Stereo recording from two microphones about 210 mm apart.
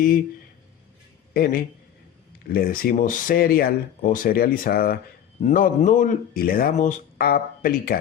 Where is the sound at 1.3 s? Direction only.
45° left (ahead or behind).